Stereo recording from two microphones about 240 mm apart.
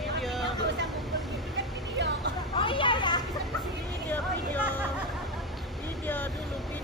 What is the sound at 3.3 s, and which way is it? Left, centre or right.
Vehicle, centre.